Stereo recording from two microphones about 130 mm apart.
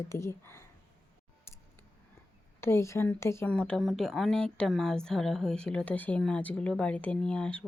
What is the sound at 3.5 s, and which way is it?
A woman's voice, 10° left (ahead or behind).